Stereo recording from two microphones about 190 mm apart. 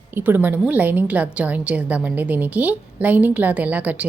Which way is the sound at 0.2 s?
10° right (ahead or behind).